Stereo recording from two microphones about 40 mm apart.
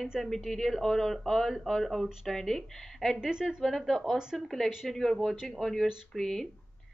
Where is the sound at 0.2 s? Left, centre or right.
Centre.